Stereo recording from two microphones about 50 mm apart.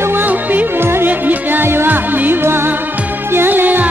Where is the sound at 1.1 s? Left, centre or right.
Right.